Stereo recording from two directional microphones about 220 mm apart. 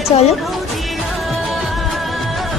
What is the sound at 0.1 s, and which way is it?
Speech, 25° left (ahead or behind).